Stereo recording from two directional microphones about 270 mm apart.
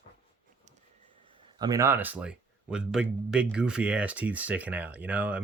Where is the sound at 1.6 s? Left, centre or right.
Centre.